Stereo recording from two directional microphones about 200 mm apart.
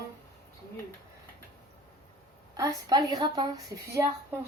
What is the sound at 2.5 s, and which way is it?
A woman's voice, 15° right (ahead or behind).